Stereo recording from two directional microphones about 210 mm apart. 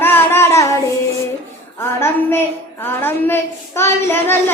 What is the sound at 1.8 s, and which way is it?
A woman's voice, 10° left (ahead or behind).